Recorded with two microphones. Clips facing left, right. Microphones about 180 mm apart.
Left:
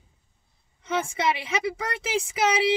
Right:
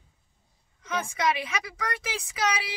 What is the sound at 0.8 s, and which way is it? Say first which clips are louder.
A woman's voice: left 3 dB; 25° left (ahead or behind).